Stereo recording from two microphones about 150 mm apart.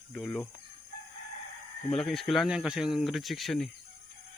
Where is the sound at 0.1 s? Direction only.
Centre (ahead or behind).